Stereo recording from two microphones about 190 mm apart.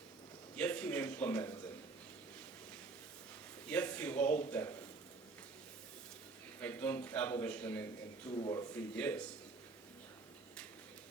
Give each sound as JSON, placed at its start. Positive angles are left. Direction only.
{"t": 0.5, "sound": "a sound", "side_deg": 5}
{"t": 3.7, "sound": "a man's voice", "side_deg": 5}
{"t": 6.6, "sound": "a man's voice", "side_deg": 10}
{"t": 8.3, "sound": "a man's voice", "side_deg": 20}
{"t": 9.0, "sound": "a man's voice", "side_deg": 10}